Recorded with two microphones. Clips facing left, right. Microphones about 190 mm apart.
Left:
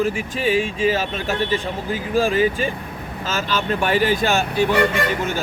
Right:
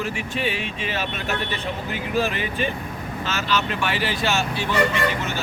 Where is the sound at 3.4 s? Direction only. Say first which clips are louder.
Left 3 dB; 45° left (ahead or behind).